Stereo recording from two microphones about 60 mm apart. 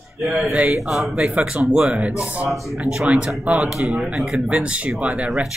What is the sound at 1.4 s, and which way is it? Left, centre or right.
Speech, centre.